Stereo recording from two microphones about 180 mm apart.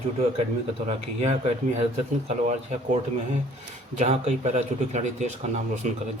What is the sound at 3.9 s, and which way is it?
Speech, 40° right (ahead or behind).